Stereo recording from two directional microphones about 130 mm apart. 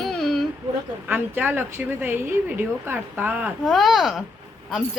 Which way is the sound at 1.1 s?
15° right (ahead or behind).